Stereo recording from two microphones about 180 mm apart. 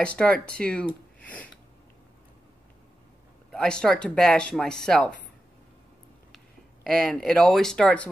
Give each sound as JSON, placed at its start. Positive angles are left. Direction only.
{"t": 0.0, "sound": "speech", "side_deg": 5}
{"t": 3.5, "sound": "speech", "side_deg": 5}
{"t": 6.3, "sound": "speech", "side_deg": 0}